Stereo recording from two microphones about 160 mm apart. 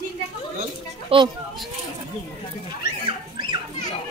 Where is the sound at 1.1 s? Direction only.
35° right (ahead or behind).